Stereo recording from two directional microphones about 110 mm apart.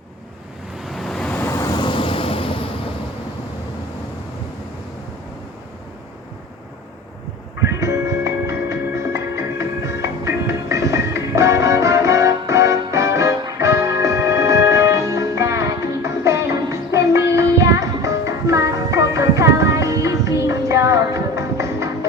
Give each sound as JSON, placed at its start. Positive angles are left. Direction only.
{"t": 0.9, "sound": "waves", "side_deg": 0}
{"t": 1.4, "sound": "vehicle", "side_deg": 25}
{"t": 1.6, "sound": "vehicle", "side_deg": 45}
{"t": 7.6, "sound": "music", "side_deg": -25}